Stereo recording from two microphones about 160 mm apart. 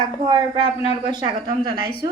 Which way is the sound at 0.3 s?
30° right (ahead or behind).